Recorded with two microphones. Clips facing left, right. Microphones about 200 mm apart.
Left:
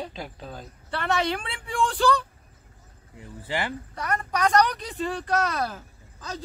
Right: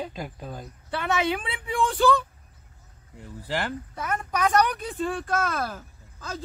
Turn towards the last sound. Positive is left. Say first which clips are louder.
# even
turn(degrees=0)  # may be behind; listen again after turning